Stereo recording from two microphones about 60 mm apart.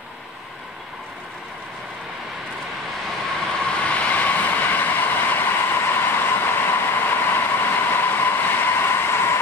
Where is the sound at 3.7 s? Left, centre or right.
Left.